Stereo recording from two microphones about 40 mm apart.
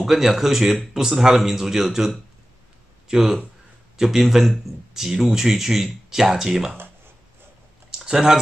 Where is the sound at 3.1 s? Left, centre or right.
Centre.